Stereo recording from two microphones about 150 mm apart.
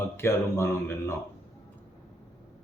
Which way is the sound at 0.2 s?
15° left (ahead or behind).